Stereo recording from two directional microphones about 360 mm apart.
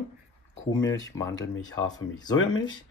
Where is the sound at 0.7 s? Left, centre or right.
Centre.